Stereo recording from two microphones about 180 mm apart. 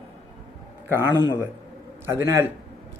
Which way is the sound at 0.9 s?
15° right (ahead or behind).